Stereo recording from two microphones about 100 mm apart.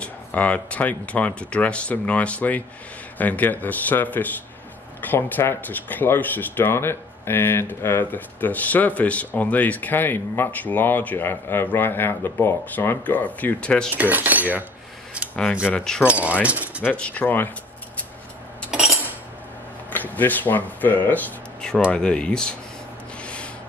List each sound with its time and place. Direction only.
0.0 s speech: 15° left (ahead or behind)
13.9 s cutlery: 15° right (ahead or behind)
15.6 s speech: 10° left (ahead or behind)
16.1 s cutlery: 15° right (ahead or behind)
16.4 s speech: 15° right (ahead or behind)
16.8 s speech: 15° left (ahead or behind)
19.9 s speech: 20° left (ahead or behind)
23.2 s a sound: 10° left (ahead or behind)